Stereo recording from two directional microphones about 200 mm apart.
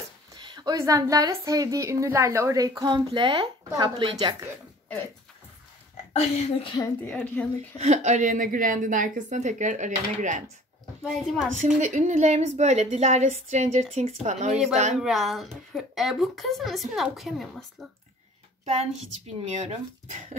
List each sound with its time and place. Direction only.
0.3 s a woman's voice: 20° right (ahead or behind)
6.1 s a woman's voice: 25° left (ahead or behind)
7.1 s a woman's voice: 5° left (ahead or behind)
7.8 s a woman's voice: 35° right (ahead or behind)
11.0 s speech: centre (ahead or behind)
11.6 s a woman's voice: 35° right (ahead or behind)
15.0 s speech: centre (ahead or behind)
19.4 s a woman's voice: 35° right (ahead or behind)